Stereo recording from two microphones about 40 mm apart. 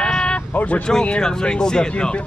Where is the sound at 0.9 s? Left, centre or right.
Centre.